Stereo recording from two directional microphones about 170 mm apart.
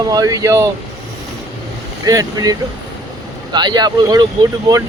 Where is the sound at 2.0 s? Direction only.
20° right (ahead or behind).